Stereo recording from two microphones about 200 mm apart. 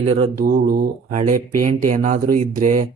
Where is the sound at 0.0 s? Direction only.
30° right (ahead or behind).